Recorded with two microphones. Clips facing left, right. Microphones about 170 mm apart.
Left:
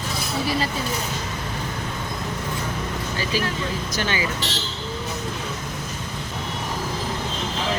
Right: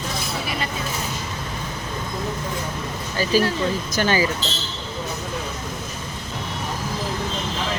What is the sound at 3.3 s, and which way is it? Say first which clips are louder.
Speech: right 7 dB; 45° right (ahead or behind).